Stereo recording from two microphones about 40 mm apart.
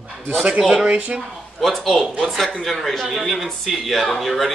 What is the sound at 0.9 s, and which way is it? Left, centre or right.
Speech, right.